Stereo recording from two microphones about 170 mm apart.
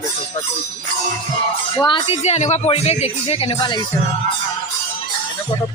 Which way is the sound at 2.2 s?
40° left (ahead or behind).